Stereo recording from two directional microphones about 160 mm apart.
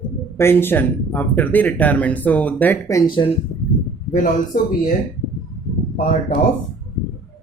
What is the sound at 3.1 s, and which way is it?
Speech, 30° left (ahead or behind).